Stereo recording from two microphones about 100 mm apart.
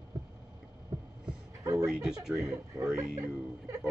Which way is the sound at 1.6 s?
35° right (ahead or behind).